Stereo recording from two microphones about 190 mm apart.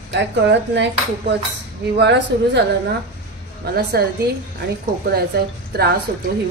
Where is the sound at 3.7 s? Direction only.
55° right (ahead or behind).